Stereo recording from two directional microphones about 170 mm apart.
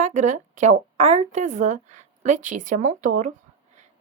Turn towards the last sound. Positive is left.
turn(degrees=-50)  # may be behind; listen again after turning